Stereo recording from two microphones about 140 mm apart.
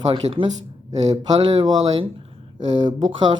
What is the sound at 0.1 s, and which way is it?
Speech, 40° right (ahead or behind).